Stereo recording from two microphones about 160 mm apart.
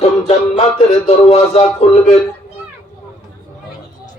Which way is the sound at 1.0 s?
35° left (ahead or behind).